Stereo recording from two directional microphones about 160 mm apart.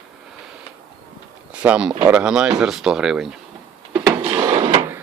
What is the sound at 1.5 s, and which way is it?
Speech, 5° right (ahead or behind).